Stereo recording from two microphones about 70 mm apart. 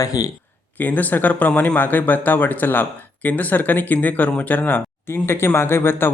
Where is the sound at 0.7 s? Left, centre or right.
Left.